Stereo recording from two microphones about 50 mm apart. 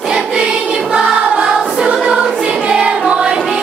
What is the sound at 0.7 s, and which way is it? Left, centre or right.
Choir, centre.